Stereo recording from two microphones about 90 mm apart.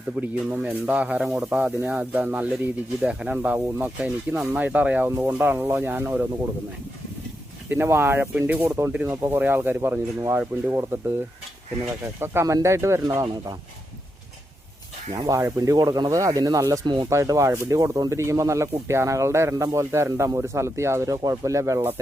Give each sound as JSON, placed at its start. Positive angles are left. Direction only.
{"t": 0.2, "sound": "speech", "side_deg": -20}
{"t": 7.7, "sound": "speech", "side_deg": -25}
{"t": 12.2, "sound": "speech", "side_deg": -30}
{"t": 15.3, "sound": "speech", "side_deg": -35}
{"t": 16.8, "sound": "speech", "side_deg": -55}
{"t": 17.1, "sound": "speech", "side_deg": -35}